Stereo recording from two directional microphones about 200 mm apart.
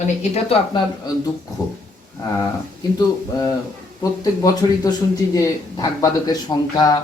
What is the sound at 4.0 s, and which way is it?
Speech, 20° left (ahead or behind).